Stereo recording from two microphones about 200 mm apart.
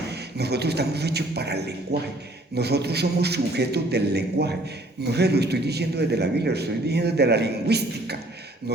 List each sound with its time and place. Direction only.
0.1 s a man's voice: 55° right (ahead or behind)